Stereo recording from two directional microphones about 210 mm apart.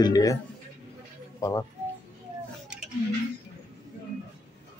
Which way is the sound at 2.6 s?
5° right (ahead or behind).